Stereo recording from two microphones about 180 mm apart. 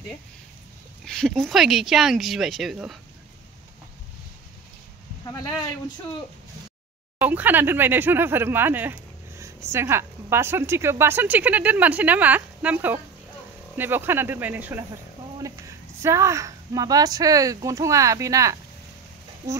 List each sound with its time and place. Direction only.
1.0 s speech: 5° left (ahead or behind)
5.2 s speech: 20° left (ahead or behind)
7.2 s a woman's voice: 10° right (ahead or behind)